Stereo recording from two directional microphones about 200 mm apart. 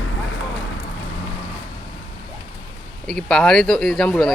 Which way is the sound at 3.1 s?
Centre (ahead or behind).